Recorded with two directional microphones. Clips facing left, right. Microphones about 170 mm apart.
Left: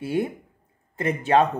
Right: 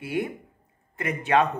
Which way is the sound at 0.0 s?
30° left (ahead or behind).